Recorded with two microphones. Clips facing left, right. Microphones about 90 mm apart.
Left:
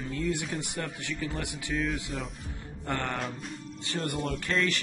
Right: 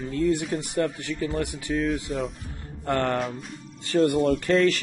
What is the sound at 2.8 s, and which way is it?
Speech, 50° right (ahead or behind).